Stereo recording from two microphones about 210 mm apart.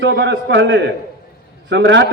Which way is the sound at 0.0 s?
60° right (ahead or behind).